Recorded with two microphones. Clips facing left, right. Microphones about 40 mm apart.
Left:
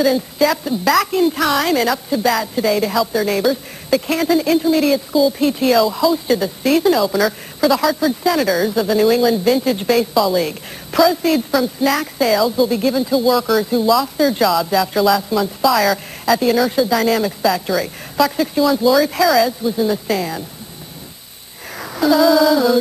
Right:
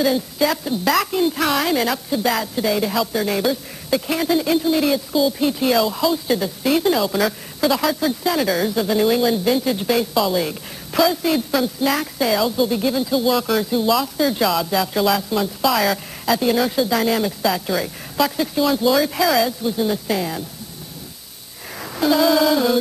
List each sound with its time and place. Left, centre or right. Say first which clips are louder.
0.0 s a woman's voice: left 3 dB; centre
10.1 s speech: left 3 dB; centre
10.4 s a woman's voice: left 3 dB; centre
11.0 s a woman's voice: left 4 dB; centre
13.1 s speech: left 4 dB; centre
18.8 s a woman's voice: left 4 dB; centre
21.7 s a sound: left 2 dB; centre
22.0 s speech: left 4 dB; centre